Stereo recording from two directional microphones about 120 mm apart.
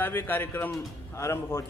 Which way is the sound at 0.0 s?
15° left (ahead or behind).